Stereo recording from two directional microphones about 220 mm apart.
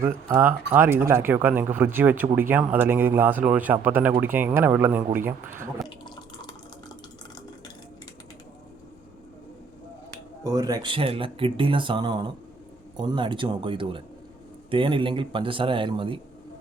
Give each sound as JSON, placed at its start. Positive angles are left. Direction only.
{"t": 0.3, "sound": "speech", "side_deg": -10}
{"t": 6.1, "sound": "water", "side_deg": 20}
{"t": 10.4, "sound": "speech", "side_deg": -15}